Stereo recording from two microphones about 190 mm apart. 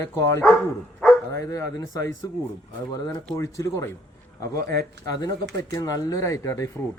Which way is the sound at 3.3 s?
15° left (ahead or behind).